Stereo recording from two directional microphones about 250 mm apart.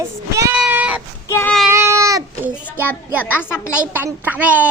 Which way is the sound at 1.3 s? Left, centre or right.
Centre.